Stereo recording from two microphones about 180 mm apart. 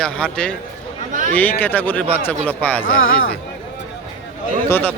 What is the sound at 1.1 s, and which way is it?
Speech, 45° right (ahead or behind).